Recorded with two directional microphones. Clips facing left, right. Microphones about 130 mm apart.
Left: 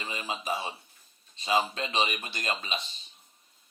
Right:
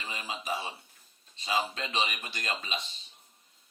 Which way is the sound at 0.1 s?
25° left (ahead or behind).